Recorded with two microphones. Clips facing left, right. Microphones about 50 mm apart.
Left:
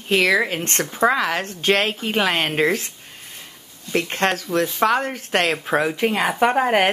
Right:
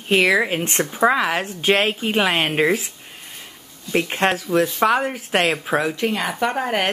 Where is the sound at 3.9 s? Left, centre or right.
Centre.